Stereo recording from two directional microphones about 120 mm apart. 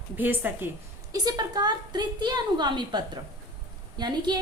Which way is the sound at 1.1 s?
35° right (ahead or behind).